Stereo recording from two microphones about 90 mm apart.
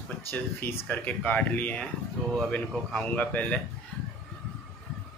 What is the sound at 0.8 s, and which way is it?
Speech, 15° left (ahead or behind).